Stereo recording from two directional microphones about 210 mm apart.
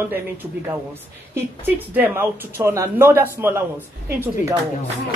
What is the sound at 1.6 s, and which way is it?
Speech, 10° right (ahead or behind).